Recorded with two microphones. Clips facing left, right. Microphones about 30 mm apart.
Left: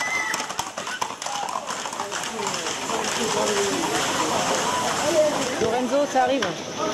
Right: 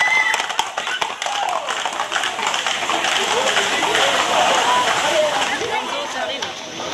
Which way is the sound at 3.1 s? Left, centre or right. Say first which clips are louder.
Right 4 dB; right.